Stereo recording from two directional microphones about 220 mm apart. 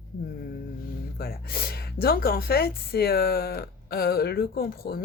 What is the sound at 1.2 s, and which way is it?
A woman's voice, 45° left (ahead or behind).